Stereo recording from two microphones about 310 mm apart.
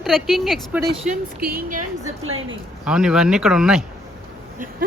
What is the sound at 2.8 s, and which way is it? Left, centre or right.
Speech, centre.